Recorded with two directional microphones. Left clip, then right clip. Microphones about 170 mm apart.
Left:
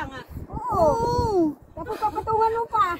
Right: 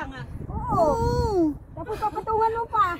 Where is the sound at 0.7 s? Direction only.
15° right (ahead or behind).